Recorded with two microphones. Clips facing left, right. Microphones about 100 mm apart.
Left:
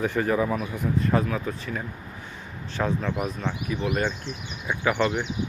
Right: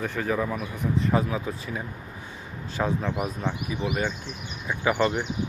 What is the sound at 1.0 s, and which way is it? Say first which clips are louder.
Speech: even; 10° right (ahead or behind).